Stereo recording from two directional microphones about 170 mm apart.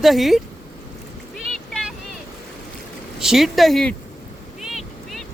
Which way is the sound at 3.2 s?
Centre (ahead or behind).